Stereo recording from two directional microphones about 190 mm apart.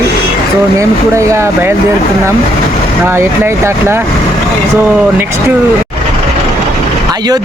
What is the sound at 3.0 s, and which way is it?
Speech, 15° right (ahead or behind).